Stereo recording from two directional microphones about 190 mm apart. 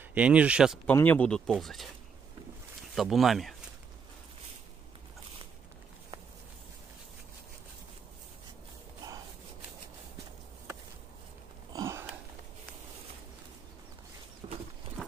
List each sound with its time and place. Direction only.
0.1 s speech: 5° right (ahead or behind)
0.8 s speech: 10° left (ahead or behind)
2.9 s speech: centre (ahead or behind)
11.7 s a sound: 15° right (ahead or behind)
14.4 s clip-clop: 30° right (ahead or behind)